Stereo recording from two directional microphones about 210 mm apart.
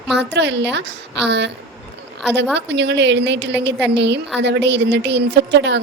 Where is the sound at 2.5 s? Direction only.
55° right (ahead or behind).